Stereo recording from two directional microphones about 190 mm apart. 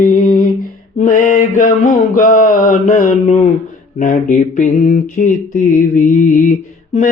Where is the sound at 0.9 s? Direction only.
45° left (ahead or behind).